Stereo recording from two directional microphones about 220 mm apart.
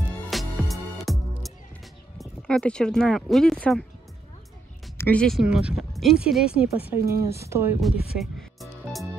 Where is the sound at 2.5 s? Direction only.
5° left (ahead or behind).